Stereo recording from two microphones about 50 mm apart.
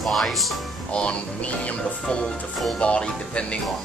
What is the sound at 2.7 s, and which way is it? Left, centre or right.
Speech, left.